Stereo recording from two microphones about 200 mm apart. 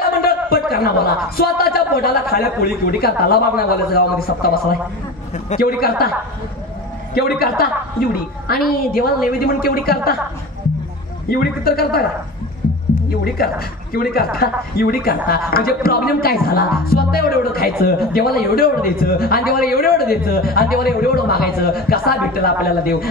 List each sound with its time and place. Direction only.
0.2 s a man's voice: 50° left (ahead or behind)
7.2 s a man's voice: 50° left (ahead or behind)
11.2 s a man's voice: 50° left (ahead or behind)
13.2 s a man's voice: 50° left (ahead or behind)